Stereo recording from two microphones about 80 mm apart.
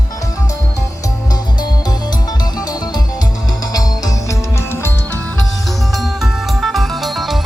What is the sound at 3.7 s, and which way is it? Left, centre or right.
Music, left.